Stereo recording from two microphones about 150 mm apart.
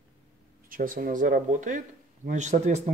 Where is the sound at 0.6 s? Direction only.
65° right (ahead or behind).